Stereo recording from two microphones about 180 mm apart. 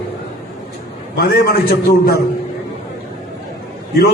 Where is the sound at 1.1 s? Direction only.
55° left (ahead or behind).